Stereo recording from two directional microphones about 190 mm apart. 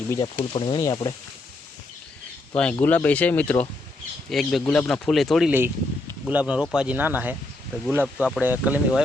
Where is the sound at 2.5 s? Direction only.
5° left (ahead or behind).